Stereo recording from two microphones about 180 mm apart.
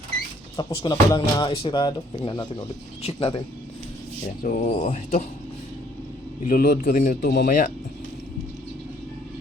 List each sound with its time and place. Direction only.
0.5 s speech: 20° left (ahead or behind)
4.4 s speech: 40° left (ahead or behind)
6.4 s a man's voice: 50° left (ahead or behind)